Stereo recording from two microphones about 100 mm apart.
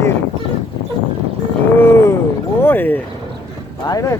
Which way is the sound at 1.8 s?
25° left (ahead or behind).